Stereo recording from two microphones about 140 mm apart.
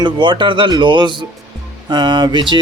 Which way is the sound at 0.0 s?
35° right (ahead or behind).